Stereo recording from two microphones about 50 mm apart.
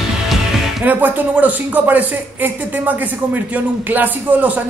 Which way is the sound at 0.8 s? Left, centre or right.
Right.